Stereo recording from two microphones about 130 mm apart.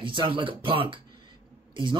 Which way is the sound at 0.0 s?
40° right (ahead or behind).